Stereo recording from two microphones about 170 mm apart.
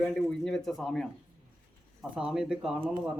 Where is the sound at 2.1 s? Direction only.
5° right (ahead or behind).